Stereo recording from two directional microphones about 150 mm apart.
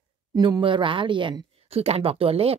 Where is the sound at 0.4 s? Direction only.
35° right (ahead or behind).